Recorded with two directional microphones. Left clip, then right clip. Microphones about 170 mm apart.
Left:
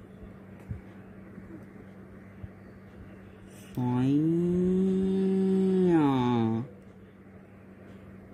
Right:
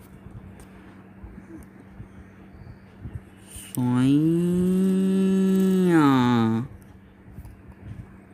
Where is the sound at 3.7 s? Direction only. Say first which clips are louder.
Right 6 dB; 45° right (ahead or behind).